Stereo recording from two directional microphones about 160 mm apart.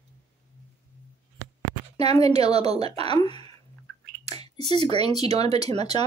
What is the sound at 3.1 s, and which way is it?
Speech, 30° left (ahead or behind).